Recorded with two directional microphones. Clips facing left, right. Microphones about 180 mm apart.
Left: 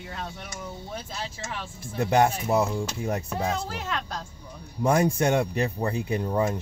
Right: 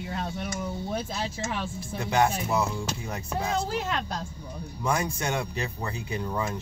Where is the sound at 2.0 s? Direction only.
55° left (ahead or behind).